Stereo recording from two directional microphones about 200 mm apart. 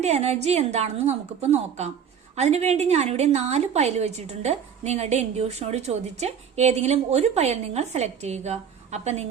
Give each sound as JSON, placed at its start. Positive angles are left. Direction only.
{"t": 0.0, "sound": "a woman's voice", "side_deg": -30}